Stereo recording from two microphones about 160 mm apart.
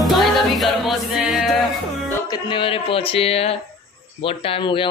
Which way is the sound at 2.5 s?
35° left (ahead or behind).